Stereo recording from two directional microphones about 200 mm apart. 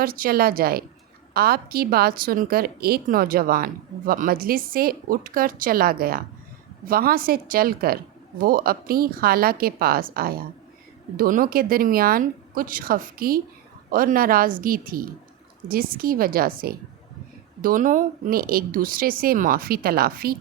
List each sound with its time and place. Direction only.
0.0 s a woman's voice: 45° right (ahead or behind)